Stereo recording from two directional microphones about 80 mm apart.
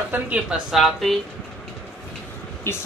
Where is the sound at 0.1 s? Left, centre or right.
Right.